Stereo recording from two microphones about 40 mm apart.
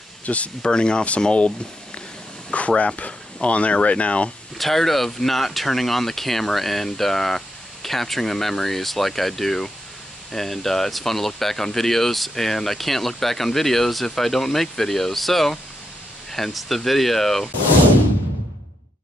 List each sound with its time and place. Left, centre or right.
0.2 s speech: left
0.6 s speech: left
2.5 s speech: left
4.6 s speech: centre